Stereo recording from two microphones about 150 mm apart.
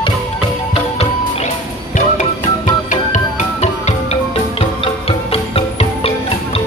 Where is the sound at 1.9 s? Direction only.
55° left (ahead or behind).